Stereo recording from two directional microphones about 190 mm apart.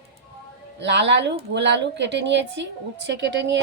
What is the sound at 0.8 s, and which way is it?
A woman's voice, 65° right (ahead or behind).